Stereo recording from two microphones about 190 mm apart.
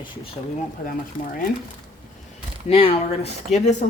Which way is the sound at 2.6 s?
30° left (ahead or behind).